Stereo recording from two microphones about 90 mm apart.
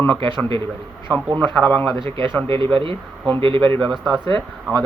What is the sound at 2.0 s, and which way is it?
Speech, 70° right (ahead or behind).